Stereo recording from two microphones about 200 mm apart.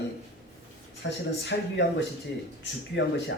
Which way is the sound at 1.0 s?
60° left (ahead or behind).